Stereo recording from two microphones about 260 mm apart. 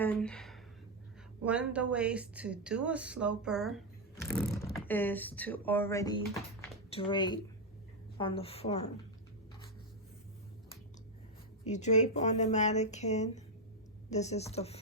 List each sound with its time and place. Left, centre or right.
0.0 s speech: centre; by 8.9 s left
11.6 s speech: left